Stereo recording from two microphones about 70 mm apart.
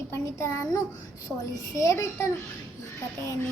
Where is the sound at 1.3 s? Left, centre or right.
Centre.